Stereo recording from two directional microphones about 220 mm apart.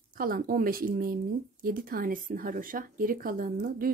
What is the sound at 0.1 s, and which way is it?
Speech, 40° right (ahead or behind).